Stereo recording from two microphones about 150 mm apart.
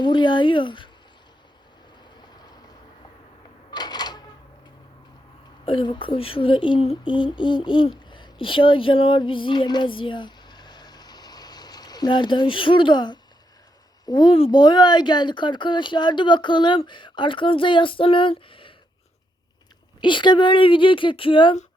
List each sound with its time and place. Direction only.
0.0 s speech: 30° left (ahead or behind)
3.7 s cash register: 30° left (ahead or behind)
5.6 s speech: 35° left (ahead or behind)
8.1 s a sound: 35° left (ahead or behind)
14.0 s speech: 30° left (ahead or behind)
20.0 s speech: 30° left (ahead or behind)